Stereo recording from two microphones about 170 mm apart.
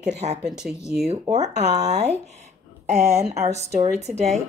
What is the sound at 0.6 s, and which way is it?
Speech, centre (ahead or behind).